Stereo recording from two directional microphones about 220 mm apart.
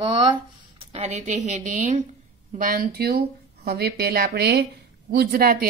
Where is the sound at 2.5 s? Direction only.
40° right (ahead or behind).